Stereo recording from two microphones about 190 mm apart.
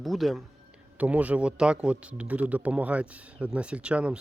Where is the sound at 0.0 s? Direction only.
Centre (ahead or behind).